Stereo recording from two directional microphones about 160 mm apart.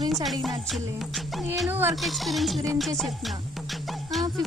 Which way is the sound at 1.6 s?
15° right (ahead or behind).